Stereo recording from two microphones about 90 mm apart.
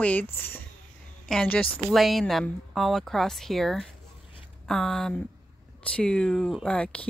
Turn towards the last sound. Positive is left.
turn(degrees=10)  # may be behind; listen again after turning